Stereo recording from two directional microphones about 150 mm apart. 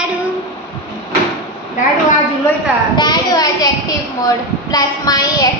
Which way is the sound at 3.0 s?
30° left (ahead or behind).